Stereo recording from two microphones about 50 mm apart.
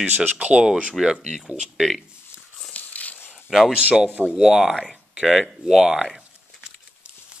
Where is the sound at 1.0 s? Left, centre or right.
Centre.